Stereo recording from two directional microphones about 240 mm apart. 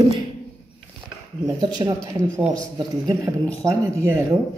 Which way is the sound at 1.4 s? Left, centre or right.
Centre.